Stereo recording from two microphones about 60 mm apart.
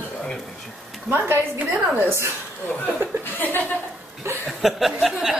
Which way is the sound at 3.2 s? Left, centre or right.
Left.